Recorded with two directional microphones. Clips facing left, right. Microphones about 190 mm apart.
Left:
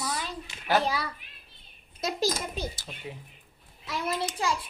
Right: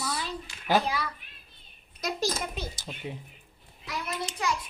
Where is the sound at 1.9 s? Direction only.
25° left (ahead or behind).